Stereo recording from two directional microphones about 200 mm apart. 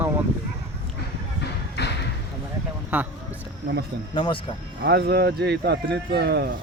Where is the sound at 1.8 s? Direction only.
60° left (ahead or behind).